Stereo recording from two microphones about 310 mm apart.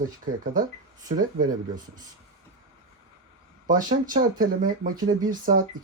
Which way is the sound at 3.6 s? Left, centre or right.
Right.